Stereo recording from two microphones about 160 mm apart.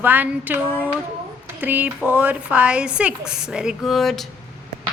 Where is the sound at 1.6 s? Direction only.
10° right (ahead or behind).